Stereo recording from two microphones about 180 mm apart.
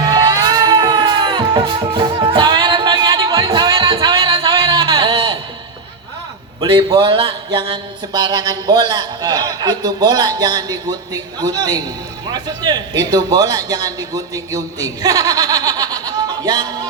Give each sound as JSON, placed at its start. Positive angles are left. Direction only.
{"t": 0.2, "sound": "music", "side_deg": -25}
{"t": 6.6, "sound": "a man's voice", "side_deg": -30}